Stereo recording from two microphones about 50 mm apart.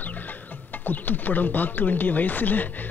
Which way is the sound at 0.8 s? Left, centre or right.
Left.